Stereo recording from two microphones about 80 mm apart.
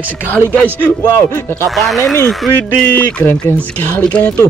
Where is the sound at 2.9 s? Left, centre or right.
Centre.